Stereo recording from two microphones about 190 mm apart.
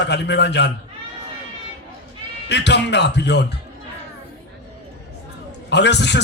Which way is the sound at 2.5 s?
65° left (ahead or behind).